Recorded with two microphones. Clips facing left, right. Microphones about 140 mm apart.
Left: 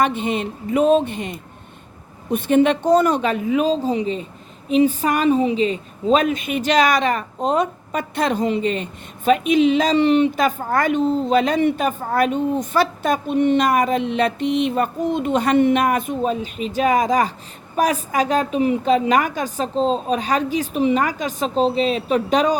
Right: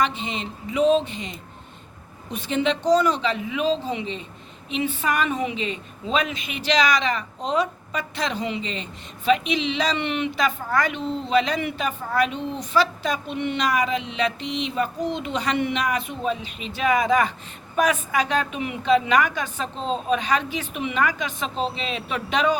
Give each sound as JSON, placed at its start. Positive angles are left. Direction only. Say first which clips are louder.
{"t": 0.0, "sound": "a woman's voice", "louder": "left 5 dB", "side_deg": 55}